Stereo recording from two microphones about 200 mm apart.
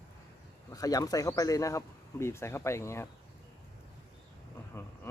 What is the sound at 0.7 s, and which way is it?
Speech, 20° left (ahead or behind).